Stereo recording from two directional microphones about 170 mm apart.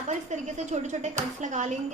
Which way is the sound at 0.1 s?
45° right (ahead or behind).